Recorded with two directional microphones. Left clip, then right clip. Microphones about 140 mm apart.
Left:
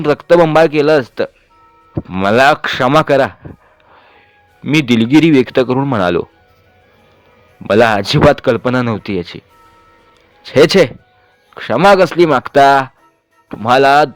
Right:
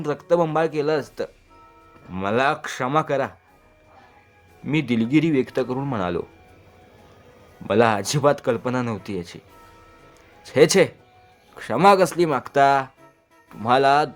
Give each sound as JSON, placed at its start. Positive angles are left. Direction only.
{"t": 0.0, "sound": "speech", "side_deg": 55}
{"t": 4.7, "sound": "speech", "side_deg": 45}
{"t": 7.7, "sound": "speech", "side_deg": 45}
{"t": 10.4, "sound": "a man's voice", "side_deg": 40}